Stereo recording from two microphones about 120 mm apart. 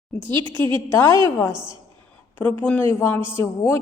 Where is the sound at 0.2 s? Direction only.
40° right (ahead or behind).